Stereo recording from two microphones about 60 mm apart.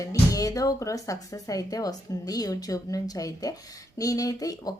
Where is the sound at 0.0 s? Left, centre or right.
Left.